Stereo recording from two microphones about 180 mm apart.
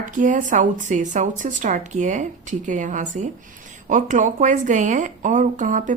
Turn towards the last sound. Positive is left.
turn(degrees=-45)  # may be behind; listen again after turning